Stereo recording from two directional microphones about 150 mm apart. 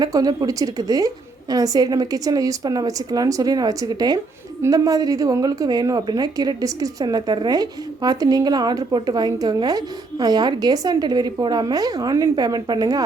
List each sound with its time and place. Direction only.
0.0 s a woman's voice: 25° right (ahead or behind)